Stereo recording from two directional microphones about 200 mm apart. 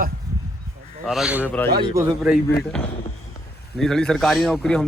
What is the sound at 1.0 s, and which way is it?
Speech, 5° right (ahead or behind).